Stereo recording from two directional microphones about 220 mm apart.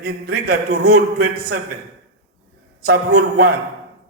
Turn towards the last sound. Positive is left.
turn(degrees=-45)  # may be behind; listen again after turning